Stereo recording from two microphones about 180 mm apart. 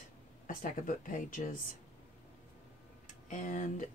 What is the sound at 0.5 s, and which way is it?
Speech, 50° left (ahead or behind).